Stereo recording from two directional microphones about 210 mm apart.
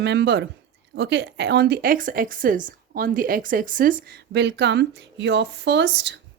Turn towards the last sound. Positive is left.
turn(degrees=-55)  # may be behind; listen again after turning